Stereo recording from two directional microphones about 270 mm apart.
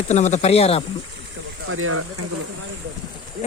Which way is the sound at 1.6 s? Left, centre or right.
Right.